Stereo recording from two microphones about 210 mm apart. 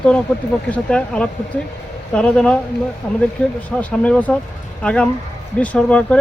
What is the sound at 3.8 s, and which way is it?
Speech, 5° left (ahead or behind).